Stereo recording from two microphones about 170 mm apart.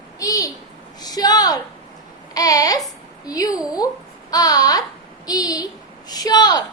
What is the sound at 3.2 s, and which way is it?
A woman's voice, 20° left (ahead or behind).